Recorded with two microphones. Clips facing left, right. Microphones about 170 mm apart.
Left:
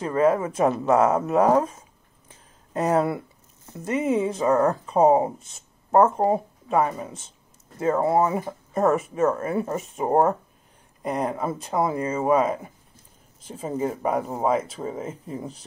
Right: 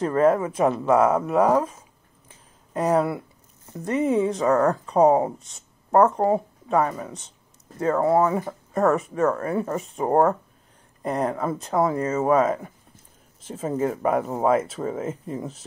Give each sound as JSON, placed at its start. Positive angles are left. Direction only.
{"t": 0.0, "sound": "speech", "side_deg": 20}
{"t": 2.7, "sound": "speech", "side_deg": 25}
{"t": 13.7, "sound": "speech", "side_deg": 0}